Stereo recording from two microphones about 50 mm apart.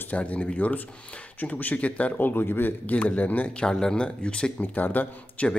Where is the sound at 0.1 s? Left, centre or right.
Left.